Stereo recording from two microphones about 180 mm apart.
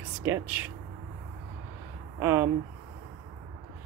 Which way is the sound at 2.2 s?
15° right (ahead or behind).